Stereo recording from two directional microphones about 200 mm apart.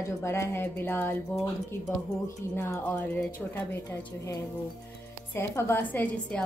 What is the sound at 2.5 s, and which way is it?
A woman's voice, 10° left (ahead or behind).